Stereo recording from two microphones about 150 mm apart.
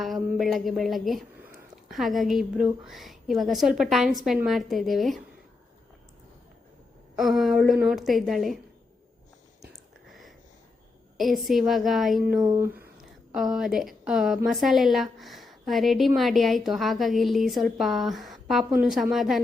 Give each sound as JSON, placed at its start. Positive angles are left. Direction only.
{"t": 0.3, "sound": "a woman's voice", "side_deg": 0}
{"t": 7.2, "sound": "a woman's voice", "side_deg": 0}
{"t": 10.1, "sound": "a sound", "side_deg": 0}
{"t": 11.2, "sound": "a woman's voice", "side_deg": 0}
{"t": 12.4, "sound": "speech", "side_deg": -20}
{"t": 13.0, "sound": "a woman's voice", "side_deg": 0}